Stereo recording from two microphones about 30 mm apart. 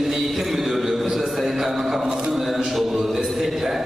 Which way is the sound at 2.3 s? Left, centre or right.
Centre.